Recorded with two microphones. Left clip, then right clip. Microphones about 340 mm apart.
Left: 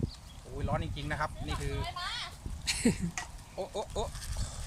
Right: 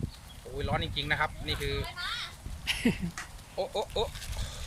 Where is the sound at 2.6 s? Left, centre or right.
Centre.